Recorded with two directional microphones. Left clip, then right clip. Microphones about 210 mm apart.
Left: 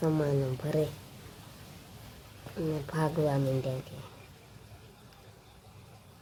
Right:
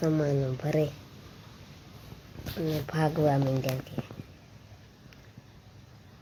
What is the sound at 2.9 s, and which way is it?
Speech, 5° right (ahead or behind).